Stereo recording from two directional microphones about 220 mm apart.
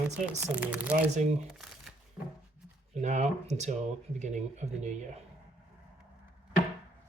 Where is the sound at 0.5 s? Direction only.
5° right (ahead or behind).